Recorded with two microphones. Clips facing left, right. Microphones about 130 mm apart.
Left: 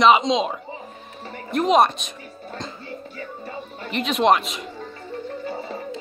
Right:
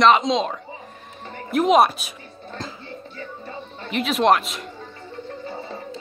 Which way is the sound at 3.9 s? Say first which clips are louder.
Even; centre (ahead or behind).